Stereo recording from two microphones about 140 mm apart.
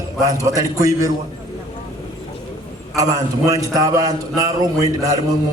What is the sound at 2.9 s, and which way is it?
A man's voice, 25° right (ahead or behind).